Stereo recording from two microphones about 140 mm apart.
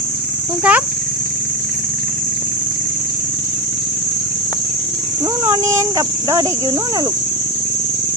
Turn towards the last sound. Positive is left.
turn(degrees=-25)  # may be behind; listen again after turning